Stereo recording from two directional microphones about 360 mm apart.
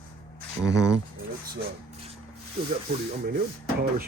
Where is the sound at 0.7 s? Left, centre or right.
Centre.